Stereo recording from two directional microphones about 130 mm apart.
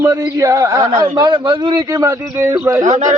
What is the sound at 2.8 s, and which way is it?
Speech, 70° right (ahead or behind).